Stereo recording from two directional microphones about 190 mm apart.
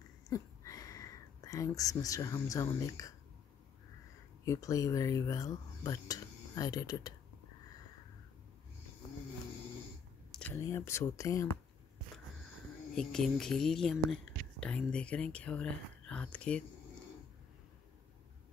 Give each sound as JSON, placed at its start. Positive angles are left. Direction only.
{"t": 0.3, "sound": "speech", "side_deg": 20}
{"t": 4.5, "sound": "speech", "side_deg": 15}
{"t": 10.3, "sound": "speech", "side_deg": 10}
{"t": 12.9, "sound": "speech", "side_deg": 5}